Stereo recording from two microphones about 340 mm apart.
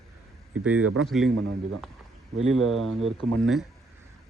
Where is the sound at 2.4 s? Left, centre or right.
Right.